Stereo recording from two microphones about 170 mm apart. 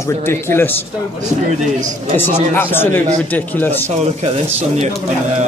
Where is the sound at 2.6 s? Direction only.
10° left (ahead or behind).